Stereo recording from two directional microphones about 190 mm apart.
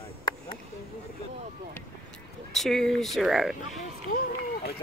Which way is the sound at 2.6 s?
Centre (ahead or behind).